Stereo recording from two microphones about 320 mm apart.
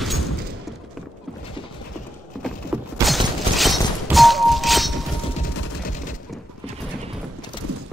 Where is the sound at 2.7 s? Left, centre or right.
Centre.